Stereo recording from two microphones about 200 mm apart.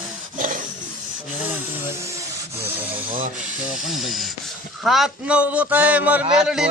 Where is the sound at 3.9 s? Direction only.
Centre (ahead or behind).